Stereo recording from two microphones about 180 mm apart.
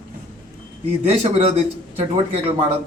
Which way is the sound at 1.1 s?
35° right (ahead or behind).